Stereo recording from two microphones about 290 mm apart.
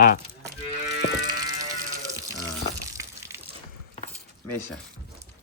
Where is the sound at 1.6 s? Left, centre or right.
Centre.